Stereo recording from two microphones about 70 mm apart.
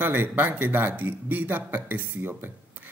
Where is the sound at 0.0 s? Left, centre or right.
Right.